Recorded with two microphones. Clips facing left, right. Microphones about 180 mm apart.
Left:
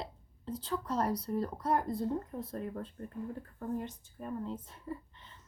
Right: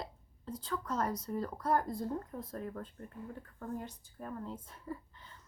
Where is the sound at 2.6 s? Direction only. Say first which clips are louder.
Left 2 dB; 15° left (ahead or behind).